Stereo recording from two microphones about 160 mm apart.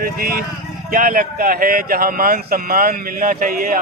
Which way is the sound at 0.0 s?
65° right (ahead or behind).